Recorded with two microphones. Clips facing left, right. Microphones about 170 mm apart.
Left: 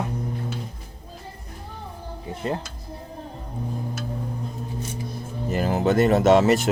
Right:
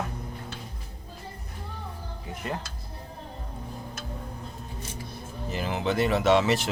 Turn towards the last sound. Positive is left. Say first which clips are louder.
# left 5 dB
turn(degrees=45)  # may be behind; listen again after turning